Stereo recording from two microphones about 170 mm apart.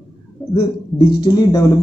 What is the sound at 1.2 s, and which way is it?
Speech, 20° left (ahead or behind).